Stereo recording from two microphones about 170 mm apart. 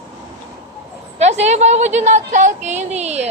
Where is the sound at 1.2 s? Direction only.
40° right (ahead or behind).